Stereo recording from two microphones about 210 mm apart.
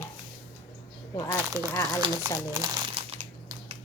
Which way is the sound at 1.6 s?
15° right (ahead or behind).